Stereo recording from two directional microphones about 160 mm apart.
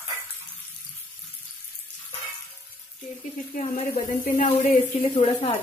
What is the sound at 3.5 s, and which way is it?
Speech, 50° left (ahead or behind).